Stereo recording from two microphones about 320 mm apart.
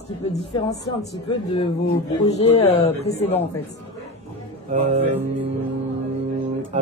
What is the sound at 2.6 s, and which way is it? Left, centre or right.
Speech, centre.